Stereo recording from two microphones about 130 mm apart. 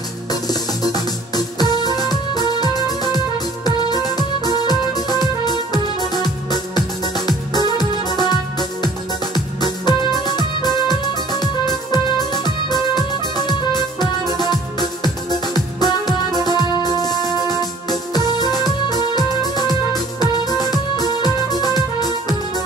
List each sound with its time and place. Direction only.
0.3 s music: 30° left (ahead or behind)
7.7 s music: 30° left (ahead or behind)